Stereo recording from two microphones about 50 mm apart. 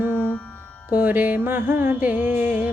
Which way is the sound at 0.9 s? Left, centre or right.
Right.